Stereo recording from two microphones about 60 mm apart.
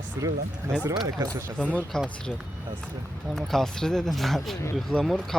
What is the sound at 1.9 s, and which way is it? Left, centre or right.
Speech, centre.